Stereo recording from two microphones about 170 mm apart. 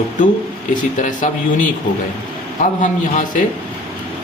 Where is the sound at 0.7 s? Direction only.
50° left (ahead or behind).